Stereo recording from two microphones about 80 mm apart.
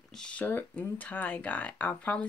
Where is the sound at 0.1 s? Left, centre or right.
Centre.